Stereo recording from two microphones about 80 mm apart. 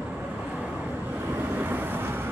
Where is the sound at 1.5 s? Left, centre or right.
Right.